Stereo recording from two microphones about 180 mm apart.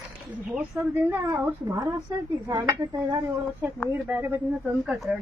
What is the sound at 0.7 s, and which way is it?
Speech, 10° right (ahead or behind).